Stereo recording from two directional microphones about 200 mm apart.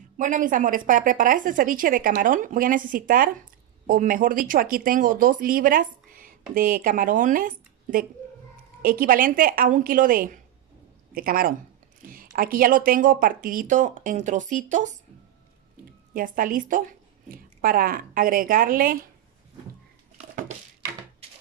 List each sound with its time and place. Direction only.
0.2 s speech: 40° right (ahead or behind)
16.1 s speech: 45° right (ahead or behind)
20.2 s a sound: 35° right (ahead or behind)